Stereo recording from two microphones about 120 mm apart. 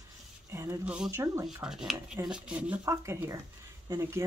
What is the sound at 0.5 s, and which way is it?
Speech, 25° right (ahead or behind).